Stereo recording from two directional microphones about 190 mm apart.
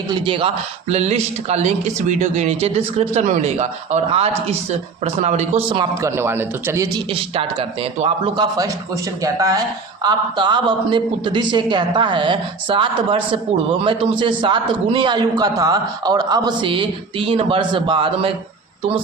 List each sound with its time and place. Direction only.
0.1 s speech: 25° right (ahead or behind)
6.0 s speech: 15° right (ahead or behind)
7.1 s a man's voice: 30° right (ahead or behind)